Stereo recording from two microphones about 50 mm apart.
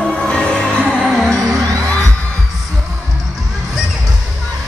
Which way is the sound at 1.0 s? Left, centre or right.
Centre.